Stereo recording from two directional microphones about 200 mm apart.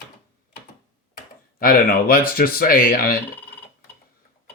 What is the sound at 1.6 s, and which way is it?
Speech, 45° left (ahead or behind).